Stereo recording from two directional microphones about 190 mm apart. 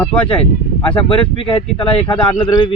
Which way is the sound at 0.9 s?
25° left (ahead or behind).